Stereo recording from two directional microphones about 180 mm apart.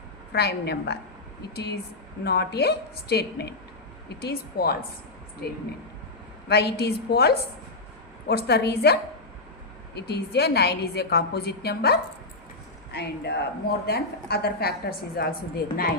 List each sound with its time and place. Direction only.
0.3 s a woman's voice: 65° left (ahead or behind)
6.5 s a woman's voice: 65° left (ahead or behind)